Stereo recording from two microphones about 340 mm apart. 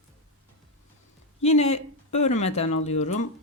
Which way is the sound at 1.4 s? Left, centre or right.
Centre.